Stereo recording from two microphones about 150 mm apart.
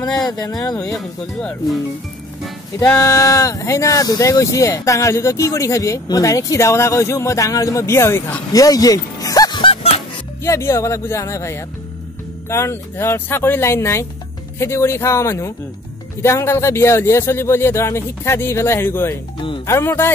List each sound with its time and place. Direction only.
0.3 s speech: 25° left (ahead or behind)
0.9 s speech: 5° left (ahead or behind)
2.9 s speech: 20° left (ahead or behind); by 10.0 s 40° left (ahead or behind)
10.4 s speech: 20° left (ahead or behind)
19.3 s music: 35° left (ahead or behind)
19.6 s speech: 15° left (ahead or behind)